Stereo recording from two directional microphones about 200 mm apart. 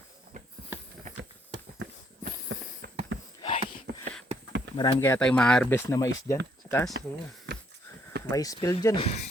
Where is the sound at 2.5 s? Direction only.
65° right (ahead or behind).